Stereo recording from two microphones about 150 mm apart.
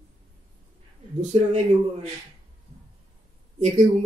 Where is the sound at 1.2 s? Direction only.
50° right (ahead or behind).